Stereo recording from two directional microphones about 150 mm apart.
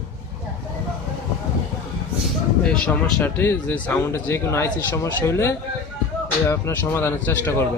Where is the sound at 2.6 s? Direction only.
5° left (ahead or behind).